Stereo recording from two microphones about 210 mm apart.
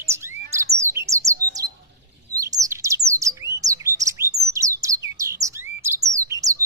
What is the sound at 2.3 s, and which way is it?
Chirp, 15° right (ahead or behind).